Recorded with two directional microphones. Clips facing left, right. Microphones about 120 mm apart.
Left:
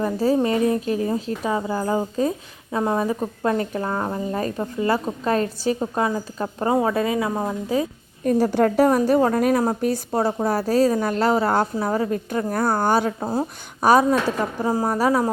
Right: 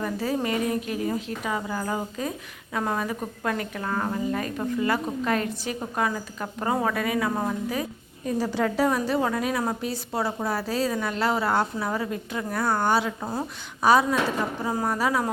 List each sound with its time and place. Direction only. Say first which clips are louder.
0.0 s a woman's voice: left 7 dB; 30° left (ahead or behind)
8.2 s a woman's voice: left 7 dB; 55° left (ahead or behind)
13.1 s a woman's voice: left 6 dB; 30° left (ahead or behind)
13.8 s a woman's voice: left 4 dB; 45° left (ahead or behind)